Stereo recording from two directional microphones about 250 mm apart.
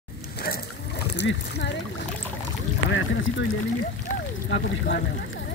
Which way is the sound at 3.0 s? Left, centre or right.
Left.